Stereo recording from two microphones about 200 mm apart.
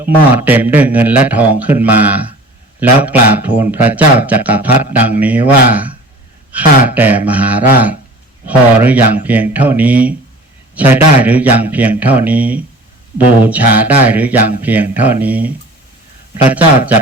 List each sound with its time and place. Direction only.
0.0 s speech: 10° right (ahead or behind)